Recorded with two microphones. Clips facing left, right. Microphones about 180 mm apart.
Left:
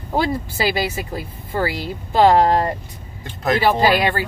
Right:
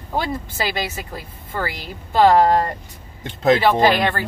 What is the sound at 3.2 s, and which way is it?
Speech, 25° right (ahead or behind).